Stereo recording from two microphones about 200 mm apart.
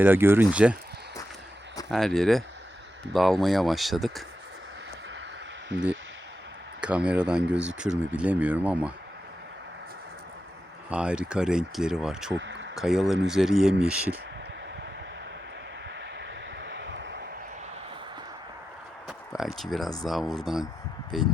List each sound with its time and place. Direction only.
0.0 s speech: 10° right (ahead or behind)
1.9 s speech: centre (ahead or behind)
6.8 s speech: 5° right (ahead or behind)
10.8 s speech: 5° right (ahead or behind)
12.3 s speech: 65° right (ahead or behind)
12.7 s speech: centre (ahead or behind)
16.6 s vehicle: 60° right (ahead or behind)
19.0 s speech: centre (ahead or behind)